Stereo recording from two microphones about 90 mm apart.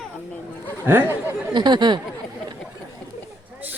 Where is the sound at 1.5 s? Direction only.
55° right (ahead or behind).